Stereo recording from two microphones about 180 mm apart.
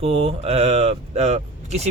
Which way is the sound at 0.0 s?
35° right (ahead or behind).